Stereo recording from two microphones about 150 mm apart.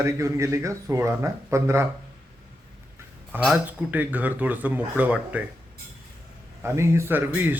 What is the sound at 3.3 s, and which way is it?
Speech, 10° right (ahead or behind).